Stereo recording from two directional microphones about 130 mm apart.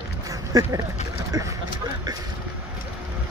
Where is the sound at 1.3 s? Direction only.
25° right (ahead or behind).